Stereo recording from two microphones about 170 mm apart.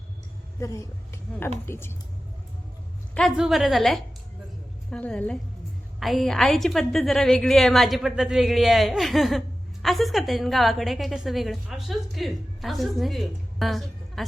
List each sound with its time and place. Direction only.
0.6 s speech: 20° left (ahead or behind)
3.2 s a woman's voice: centre (ahead or behind)